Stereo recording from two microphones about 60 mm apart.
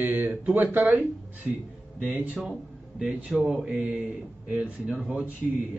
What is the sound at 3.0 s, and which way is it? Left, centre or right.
Speech, centre.